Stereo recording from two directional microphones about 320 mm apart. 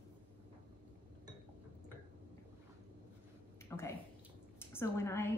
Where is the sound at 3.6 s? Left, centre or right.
Centre.